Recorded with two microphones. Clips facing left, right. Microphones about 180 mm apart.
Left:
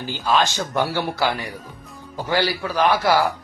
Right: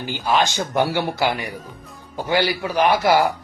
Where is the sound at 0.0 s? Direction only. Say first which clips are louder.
Even; 15° right (ahead or behind).